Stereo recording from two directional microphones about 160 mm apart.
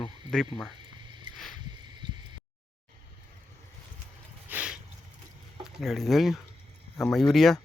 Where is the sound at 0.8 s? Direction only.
30° right (ahead or behind).